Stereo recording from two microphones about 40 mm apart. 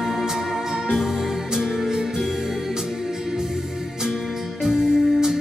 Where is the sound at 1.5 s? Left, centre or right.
Centre.